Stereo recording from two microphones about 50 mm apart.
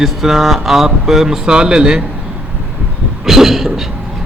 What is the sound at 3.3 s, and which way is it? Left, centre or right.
Speech, centre.